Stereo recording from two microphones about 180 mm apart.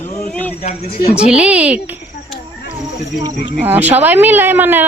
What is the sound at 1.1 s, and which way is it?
Speech, 5° right (ahead or behind).